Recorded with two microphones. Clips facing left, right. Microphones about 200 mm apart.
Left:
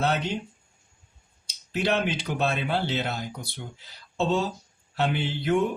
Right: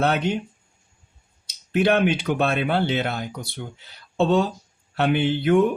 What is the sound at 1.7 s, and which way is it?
Speech, 60° right (ahead or behind).